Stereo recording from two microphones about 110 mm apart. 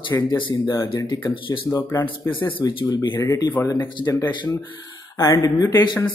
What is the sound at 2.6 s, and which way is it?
Speech, 40° left (ahead or behind).